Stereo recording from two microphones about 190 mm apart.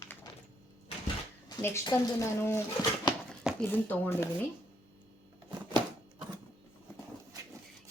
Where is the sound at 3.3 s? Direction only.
5° left (ahead or behind).